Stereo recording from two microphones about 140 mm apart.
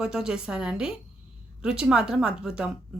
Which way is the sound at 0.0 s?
5° right (ahead or behind).